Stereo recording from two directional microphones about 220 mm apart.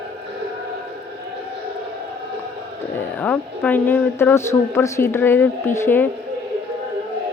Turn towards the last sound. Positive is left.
turn(degrees=10)  # may be behind; listen again after turning